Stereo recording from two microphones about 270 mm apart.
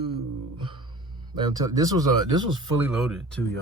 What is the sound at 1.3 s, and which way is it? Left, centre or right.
Speech, centre.